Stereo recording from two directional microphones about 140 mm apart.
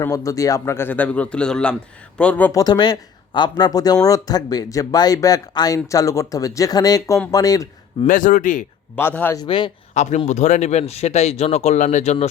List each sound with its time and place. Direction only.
0.0 s a man's voice: 20° left (ahead or behind)
2.5 s speech: 25° left (ahead or behind)
8.0 s speech: 70° left (ahead or behind)
9.0 s a man's voice: 15° left (ahead or behind)
9.4 s speech: 35° left (ahead or behind)
9.9 s speech: 55° left (ahead or behind)